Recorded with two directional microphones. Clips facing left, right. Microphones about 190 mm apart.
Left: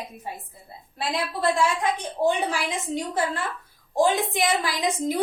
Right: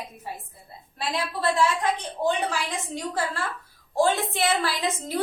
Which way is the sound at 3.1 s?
20° left (ahead or behind).